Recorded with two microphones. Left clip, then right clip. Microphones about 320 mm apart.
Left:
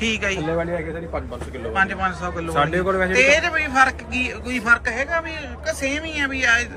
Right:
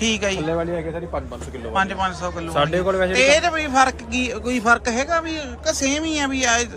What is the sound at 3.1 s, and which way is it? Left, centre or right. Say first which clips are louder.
A man's voice: even; centre.